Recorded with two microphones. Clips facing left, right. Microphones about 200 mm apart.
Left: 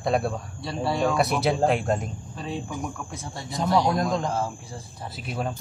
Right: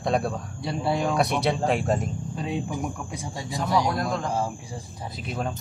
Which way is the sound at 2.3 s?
15° right (ahead or behind).